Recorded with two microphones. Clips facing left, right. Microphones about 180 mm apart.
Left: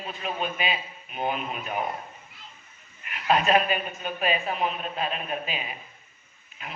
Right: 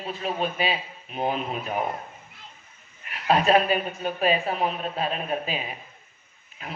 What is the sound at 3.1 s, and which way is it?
A man's voice, 35° right (ahead or behind).